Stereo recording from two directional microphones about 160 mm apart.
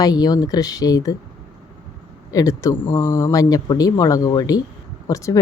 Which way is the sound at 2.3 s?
20° left (ahead or behind).